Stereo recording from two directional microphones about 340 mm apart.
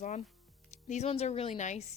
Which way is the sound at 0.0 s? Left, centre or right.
Centre.